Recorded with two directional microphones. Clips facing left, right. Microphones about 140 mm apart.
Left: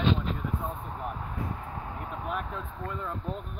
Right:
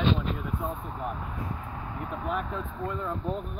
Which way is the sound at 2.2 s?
5° left (ahead or behind).